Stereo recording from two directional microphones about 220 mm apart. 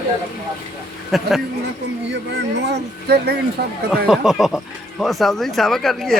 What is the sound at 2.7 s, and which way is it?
Speech, 45° right (ahead or behind).